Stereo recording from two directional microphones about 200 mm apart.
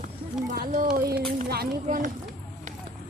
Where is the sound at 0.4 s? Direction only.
40° right (ahead or behind).